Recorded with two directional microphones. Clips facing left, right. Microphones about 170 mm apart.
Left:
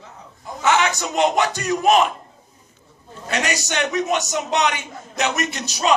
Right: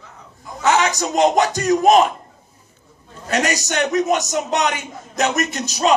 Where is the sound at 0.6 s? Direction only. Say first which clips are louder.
Right 2 dB; 40° right (ahead or behind).